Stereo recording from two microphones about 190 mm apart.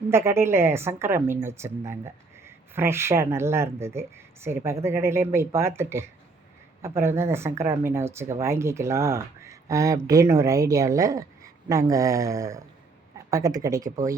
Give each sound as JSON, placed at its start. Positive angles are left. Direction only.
{"t": 0.1, "sound": "a woman's voice", "side_deg": -15}